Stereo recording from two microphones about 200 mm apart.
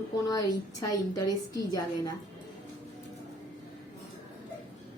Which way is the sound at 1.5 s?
20° left (ahead or behind).